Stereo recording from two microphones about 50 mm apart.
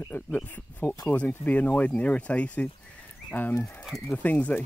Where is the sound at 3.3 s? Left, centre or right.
Left.